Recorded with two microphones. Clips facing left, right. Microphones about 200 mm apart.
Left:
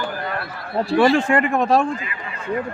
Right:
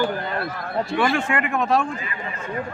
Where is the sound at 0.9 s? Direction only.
35° left (ahead or behind).